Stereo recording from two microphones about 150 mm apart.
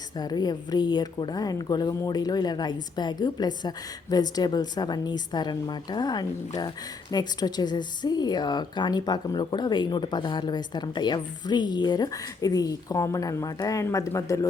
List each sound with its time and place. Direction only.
0.2 s speech: 25° left (ahead or behind)